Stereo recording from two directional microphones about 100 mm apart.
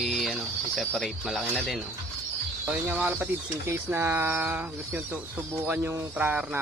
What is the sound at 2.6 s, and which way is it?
Speech, 15° right (ahead or behind).